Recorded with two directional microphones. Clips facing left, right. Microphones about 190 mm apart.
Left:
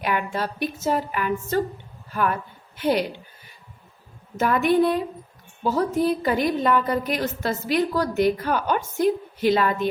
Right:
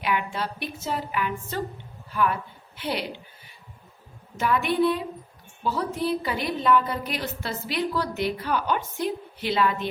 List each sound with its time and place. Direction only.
0.0 s a woman's voice: 45° left (ahead or behind)
4.4 s a woman's voice: 45° left (ahead or behind)